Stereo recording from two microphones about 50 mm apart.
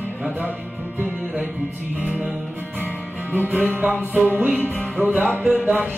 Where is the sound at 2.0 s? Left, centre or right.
Right.